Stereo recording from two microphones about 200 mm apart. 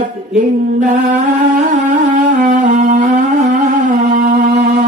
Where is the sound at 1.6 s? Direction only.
40° right (ahead or behind).